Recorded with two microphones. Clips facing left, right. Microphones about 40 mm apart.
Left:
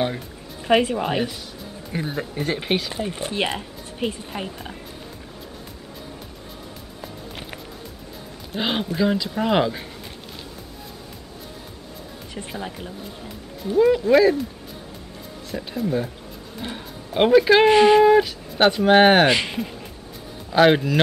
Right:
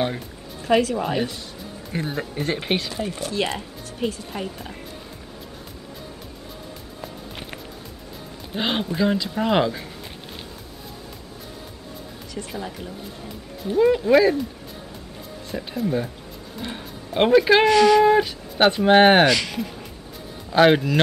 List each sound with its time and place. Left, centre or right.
0.7 s speech: left
1.9 s speech: centre
3.1 s speech: left
4.3 s speech: centre
7.0 s music: centre
8.5 s speech: centre
12.4 s speech: centre
13.7 s speech: centre
15.5 s speech: centre
17.6 s speech: left
18.0 s speech: centre
19.2 s speech: left
20.4 s speech: centre